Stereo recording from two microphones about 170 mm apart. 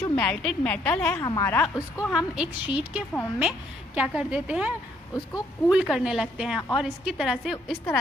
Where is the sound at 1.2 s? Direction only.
20° left (ahead or behind).